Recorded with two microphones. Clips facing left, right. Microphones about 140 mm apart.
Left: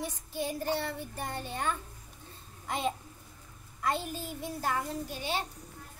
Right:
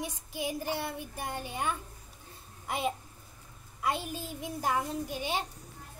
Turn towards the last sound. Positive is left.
turn(degrees=-15)  # may be behind; listen again after turning